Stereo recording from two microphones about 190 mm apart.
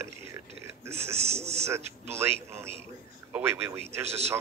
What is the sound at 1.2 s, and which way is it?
Speech, 35° right (ahead or behind).